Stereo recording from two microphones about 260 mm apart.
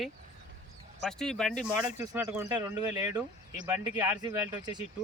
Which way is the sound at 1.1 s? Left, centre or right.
Centre.